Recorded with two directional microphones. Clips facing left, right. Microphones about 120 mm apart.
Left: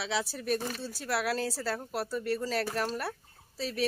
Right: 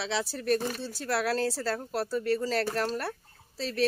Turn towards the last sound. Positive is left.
turn(degrees=10)  # may be behind; listen again after turning